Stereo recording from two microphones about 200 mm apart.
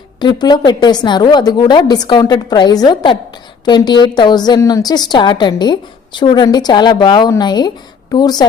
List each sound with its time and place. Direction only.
0.2 s a woman's voice: 20° left (ahead or behind)